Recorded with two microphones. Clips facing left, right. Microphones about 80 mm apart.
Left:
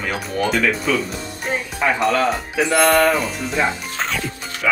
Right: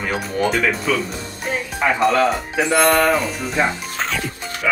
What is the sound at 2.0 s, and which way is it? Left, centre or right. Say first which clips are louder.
Speech: right 2 dB; centre.